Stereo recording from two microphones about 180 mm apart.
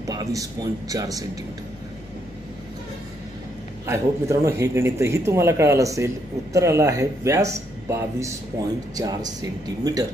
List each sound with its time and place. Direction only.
0.0 s a man's voice: 20° right (ahead or behind)
3.8 s a man's voice: 15° right (ahead or behind)